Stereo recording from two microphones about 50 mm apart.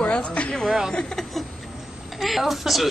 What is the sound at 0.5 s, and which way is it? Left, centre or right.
Speech, centre.